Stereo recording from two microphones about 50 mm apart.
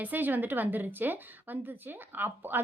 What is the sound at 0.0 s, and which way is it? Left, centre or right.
A woman's voice, right.